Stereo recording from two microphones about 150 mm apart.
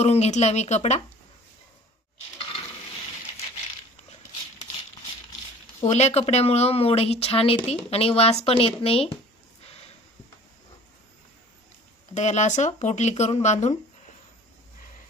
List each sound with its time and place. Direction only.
0.0 s speech: 45° left (ahead or behind)
5.8 s a woman's voice: 45° left (ahead or behind)
12.1 s speech: 50° left (ahead or behind)